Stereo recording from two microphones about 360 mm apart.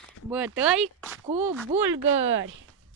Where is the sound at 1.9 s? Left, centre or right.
Right.